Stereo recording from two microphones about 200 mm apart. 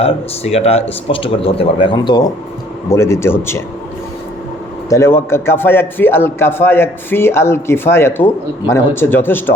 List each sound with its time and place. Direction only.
0.0 s a man's voice: 30° left (ahead or behind); by 3.6 s 10° left (ahead or behind)
4.9 s a man's voice: 15° left (ahead or behind)